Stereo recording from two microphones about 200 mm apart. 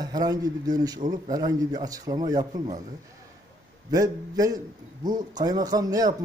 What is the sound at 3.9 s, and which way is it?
A man's voice, 20° right (ahead or behind).